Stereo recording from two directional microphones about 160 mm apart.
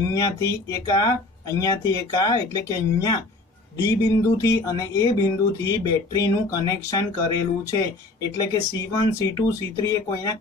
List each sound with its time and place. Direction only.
0.1 s speech: 20° left (ahead or behind)